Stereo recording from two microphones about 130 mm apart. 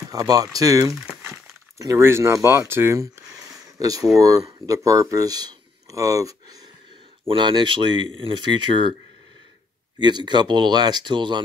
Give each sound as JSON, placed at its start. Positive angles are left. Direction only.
{"t": 0.1, "sound": "speech", "side_deg": -30}
{"t": 9.9, "sound": "speech", "side_deg": -35}